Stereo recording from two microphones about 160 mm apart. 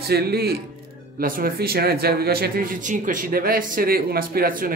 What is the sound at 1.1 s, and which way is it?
Speech, 65° right (ahead or behind).